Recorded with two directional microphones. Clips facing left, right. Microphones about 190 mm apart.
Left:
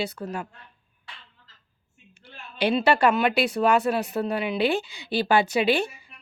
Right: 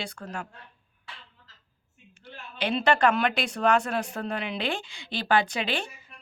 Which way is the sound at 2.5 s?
10° left (ahead or behind).